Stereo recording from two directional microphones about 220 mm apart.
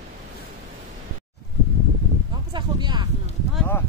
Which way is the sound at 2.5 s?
20° right (ahead or behind).